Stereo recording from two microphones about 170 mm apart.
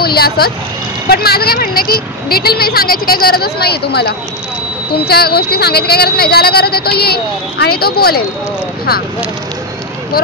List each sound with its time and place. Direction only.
0.0 s speech: 65° left (ahead or behind)